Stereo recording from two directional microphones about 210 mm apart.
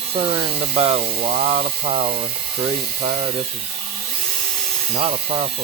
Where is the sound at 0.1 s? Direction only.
25° right (ahead or behind).